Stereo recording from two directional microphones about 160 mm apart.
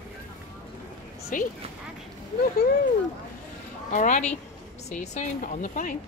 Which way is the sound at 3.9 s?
50° left (ahead or behind).